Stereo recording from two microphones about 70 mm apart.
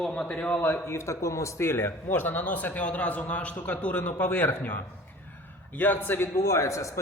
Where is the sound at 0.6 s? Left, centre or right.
Left.